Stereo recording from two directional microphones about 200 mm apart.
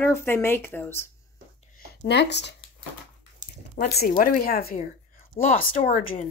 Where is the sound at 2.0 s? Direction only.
60° left (ahead or behind).